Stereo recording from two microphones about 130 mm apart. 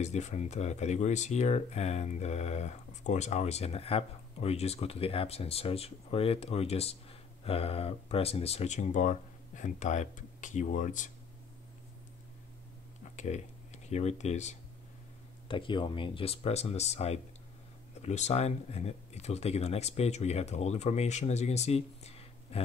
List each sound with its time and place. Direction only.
0.0 s speech: 65° left (ahead or behind)
13.1 s speech: 65° left (ahead or behind)
15.4 s speech: 40° left (ahead or behind)